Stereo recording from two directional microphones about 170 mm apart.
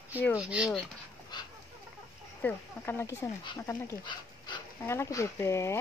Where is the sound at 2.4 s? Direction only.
15° left (ahead or behind).